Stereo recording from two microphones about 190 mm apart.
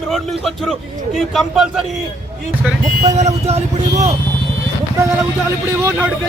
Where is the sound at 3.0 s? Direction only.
35° right (ahead or behind).